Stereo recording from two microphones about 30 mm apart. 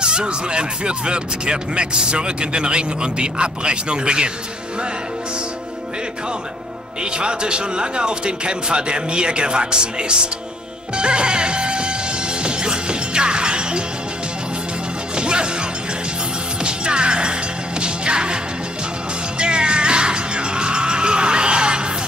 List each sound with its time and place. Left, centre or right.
0.0 s speech: right
7.0 s speech: right
11.0 s music: right
15.1 s music: right
16.6 s music: right